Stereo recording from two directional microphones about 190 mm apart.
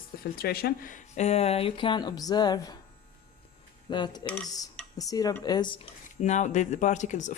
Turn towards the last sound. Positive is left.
turn(degrees=40)  # may be behind; listen again after turning